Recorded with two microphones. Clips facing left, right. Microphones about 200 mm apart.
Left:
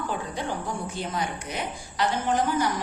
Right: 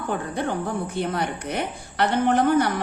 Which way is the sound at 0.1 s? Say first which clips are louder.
Right 4 dB; 60° right (ahead or behind).